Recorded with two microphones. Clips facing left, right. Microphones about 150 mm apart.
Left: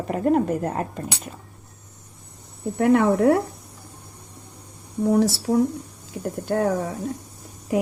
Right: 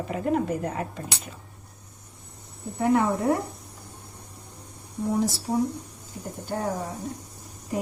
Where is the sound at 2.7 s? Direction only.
75° left (ahead or behind).